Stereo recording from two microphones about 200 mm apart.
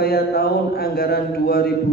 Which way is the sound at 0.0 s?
50° left (ahead or behind).